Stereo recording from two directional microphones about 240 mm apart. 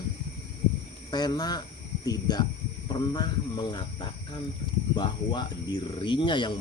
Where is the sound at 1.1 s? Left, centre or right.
Centre.